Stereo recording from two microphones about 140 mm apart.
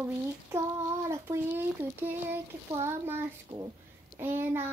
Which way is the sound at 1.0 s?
20° right (ahead or behind).